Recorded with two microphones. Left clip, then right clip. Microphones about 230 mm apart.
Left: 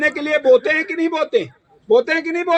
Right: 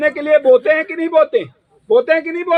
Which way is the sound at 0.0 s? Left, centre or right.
Left.